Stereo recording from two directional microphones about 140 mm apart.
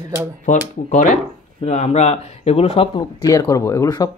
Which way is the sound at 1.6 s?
50° left (ahead or behind).